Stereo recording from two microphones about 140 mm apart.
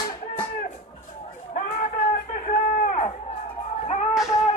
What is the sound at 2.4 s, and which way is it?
Run, 60° left (ahead or behind).